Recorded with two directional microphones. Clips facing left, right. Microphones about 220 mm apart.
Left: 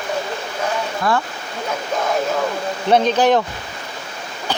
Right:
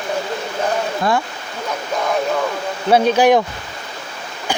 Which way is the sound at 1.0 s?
15° right (ahead or behind).